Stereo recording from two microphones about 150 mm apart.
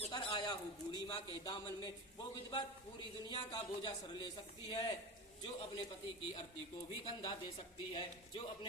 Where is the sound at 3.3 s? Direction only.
30° left (ahead or behind).